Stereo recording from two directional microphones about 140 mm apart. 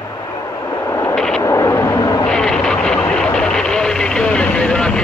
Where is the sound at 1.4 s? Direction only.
20° left (ahead or behind).